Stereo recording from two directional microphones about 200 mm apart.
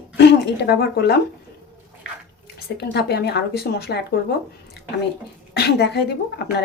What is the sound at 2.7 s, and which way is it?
Speech, 55° left (ahead or behind).